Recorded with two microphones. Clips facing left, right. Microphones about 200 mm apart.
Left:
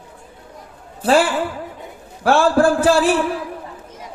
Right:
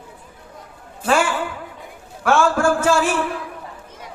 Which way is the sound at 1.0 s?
35° left (ahead or behind).